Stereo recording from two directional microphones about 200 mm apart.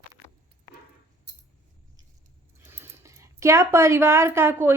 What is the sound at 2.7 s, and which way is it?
Speech, 10° right (ahead or behind).